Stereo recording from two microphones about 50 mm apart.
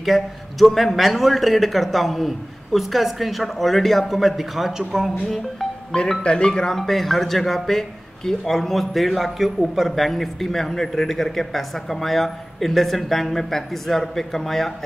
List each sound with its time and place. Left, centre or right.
0.0 s a man's voice: centre
5.3 s music: centre
6.2 s speech: centre
6.8 s a man's voice: centre